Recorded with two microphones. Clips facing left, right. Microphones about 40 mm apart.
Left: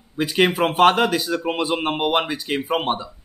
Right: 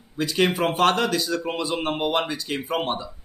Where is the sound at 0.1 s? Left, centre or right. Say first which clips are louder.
Left 3 dB; left.